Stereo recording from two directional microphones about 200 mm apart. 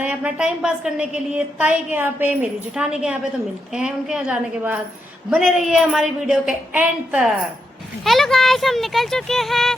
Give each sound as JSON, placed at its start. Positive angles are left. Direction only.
{"t": 0.0, "sound": "a woman's voice", "side_deg": -5}